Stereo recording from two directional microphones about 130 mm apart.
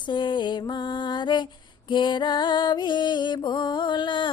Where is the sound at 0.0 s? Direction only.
35° left (ahead or behind).